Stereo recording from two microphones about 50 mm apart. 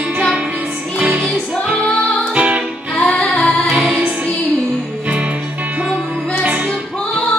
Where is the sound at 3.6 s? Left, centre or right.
Centre.